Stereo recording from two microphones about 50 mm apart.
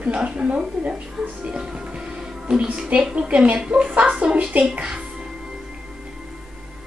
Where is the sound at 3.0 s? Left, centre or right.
Right.